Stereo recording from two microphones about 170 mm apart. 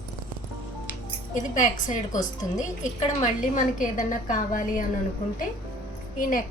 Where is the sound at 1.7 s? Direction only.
45° left (ahead or behind).